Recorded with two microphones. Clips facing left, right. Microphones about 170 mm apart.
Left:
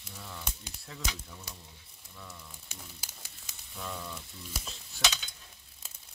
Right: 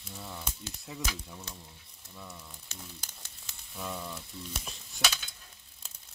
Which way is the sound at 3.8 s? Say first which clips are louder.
Right 2 dB; 10° right (ahead or behind).